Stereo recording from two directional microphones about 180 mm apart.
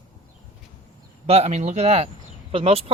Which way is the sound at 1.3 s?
35° right (ahead or behind).